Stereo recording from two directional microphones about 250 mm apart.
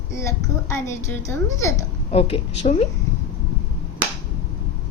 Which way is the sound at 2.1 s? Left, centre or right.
Left.